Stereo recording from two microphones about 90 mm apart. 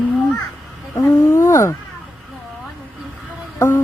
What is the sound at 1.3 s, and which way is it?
Speech, 35° left (ahead or behind).